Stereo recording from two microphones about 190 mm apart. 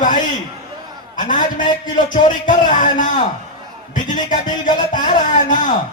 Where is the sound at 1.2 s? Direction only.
45° left (ahead or behind).